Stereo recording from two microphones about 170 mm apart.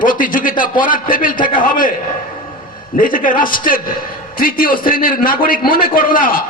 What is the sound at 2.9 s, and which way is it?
A man's voice, 55° left (ahead or behind).